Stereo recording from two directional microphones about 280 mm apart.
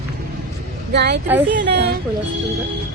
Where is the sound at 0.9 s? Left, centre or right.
Right.